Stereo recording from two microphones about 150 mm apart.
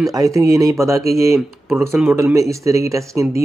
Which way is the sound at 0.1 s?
20° right (ahead or behind).